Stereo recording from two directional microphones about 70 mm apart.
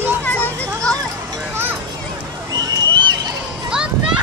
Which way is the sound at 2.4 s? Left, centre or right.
Right.